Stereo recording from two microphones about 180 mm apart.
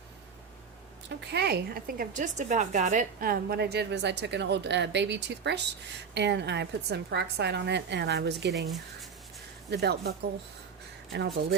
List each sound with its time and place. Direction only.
1.3 s a woman's voice: 65° right (ahead or behind)
8.5 s speech: centre (ahead or behind)
9.6 s a woman's voice: 65° right (ahead or behind)